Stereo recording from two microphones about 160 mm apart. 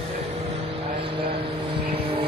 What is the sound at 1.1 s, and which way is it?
Vehicle, 35° right (ahead or behind).